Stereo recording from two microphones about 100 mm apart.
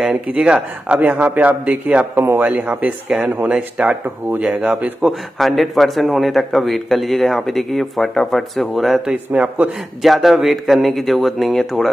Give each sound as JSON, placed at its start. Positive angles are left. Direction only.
{"t": 0.0, "sound": "speech", "side_deg": -10}
{"t": 5.4, "sound": "a man's voice", "side_deg": 0}
{"t": 9.1, "sound": "speech", "side_deg": -15}
{"t": 10.0, "sound": "a man's voice", "side_deg": 0}